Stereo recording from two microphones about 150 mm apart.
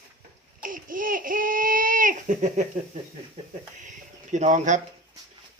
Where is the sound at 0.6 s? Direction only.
65° right (ahead or behind).